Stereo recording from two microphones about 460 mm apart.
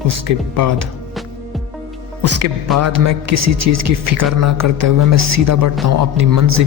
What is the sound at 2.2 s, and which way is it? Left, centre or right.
A man's voice, right.